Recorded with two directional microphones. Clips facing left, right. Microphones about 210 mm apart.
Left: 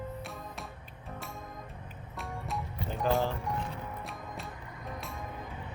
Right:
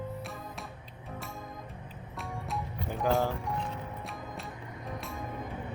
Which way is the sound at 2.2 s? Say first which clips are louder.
Right 1 dB; centre (ahead or behind).